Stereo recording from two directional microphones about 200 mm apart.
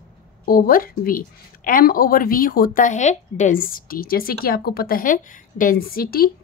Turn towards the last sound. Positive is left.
turn(degrees=50)  # may be behind; listen again after turning